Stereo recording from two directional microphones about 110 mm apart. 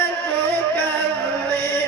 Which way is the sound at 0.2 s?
15° left (ahead or behind).